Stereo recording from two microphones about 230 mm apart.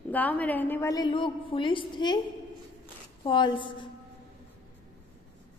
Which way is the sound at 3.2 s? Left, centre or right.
Left.